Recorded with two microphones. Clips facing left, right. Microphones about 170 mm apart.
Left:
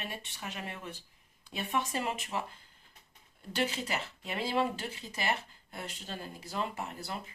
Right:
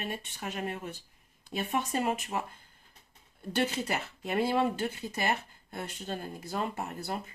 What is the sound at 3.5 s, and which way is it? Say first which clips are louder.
Speech: right 3 dB; 50° right (ahead or behind).